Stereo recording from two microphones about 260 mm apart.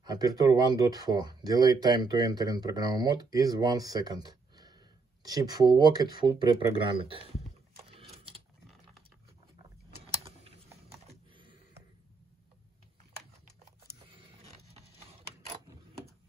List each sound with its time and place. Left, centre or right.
0.0 s speech: centre
7.7 s a sound: right
10.2 s typing: right